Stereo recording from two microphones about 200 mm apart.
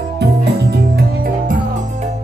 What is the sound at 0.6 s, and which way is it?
Music, 55° right (ahead or behind).